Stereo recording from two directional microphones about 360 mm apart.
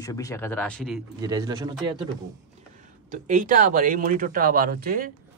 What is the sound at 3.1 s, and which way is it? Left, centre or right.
Speech, right.